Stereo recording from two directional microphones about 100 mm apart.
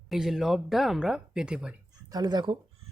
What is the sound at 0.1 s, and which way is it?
Speech, 5° right (ahead or behind).